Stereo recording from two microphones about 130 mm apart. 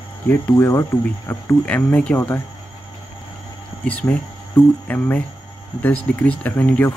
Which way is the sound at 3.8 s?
10° left (ahead or behind).